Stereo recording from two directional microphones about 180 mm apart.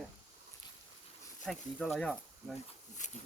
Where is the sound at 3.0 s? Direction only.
40° left (ahead or behind).